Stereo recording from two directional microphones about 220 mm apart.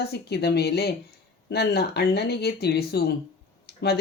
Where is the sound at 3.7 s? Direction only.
45° left (ahead or behind).